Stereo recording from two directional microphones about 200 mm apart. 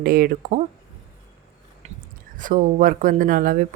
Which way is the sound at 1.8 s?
35° right (ahead or behind).